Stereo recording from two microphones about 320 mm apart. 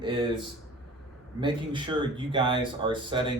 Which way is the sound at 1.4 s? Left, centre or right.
Centre.